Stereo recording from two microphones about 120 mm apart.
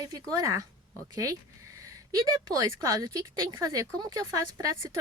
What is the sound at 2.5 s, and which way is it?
A woman's voice, 25° right (ahead or behind).